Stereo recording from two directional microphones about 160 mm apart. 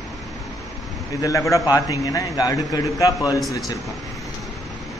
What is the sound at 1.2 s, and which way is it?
A man's voice, 20° left (ahead or behind).